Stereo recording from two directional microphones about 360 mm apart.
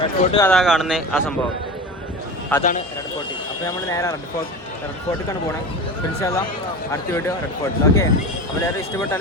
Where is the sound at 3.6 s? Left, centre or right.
Centre.